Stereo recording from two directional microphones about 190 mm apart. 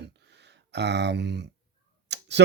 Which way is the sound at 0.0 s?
65° right (ahead or behind).